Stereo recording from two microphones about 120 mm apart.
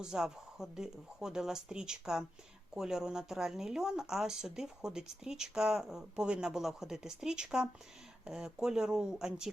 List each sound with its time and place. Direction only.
0.0 s speech: 5° right (ahead or behind)